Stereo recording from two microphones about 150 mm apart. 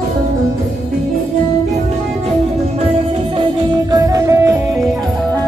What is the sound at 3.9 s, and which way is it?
Music, 20° right (ahead or behind).